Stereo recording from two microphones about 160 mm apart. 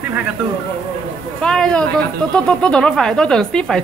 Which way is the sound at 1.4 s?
5° left (ahead or behind).